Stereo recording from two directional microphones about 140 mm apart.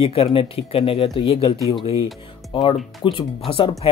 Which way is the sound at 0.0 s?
40° left (ahead or behind).